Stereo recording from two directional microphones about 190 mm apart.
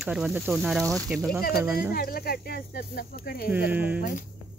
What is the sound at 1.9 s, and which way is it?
Speech, 50° left (ahead or behind).